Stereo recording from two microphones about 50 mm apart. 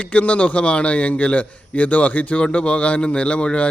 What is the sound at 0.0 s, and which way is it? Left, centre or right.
A man's voice, left.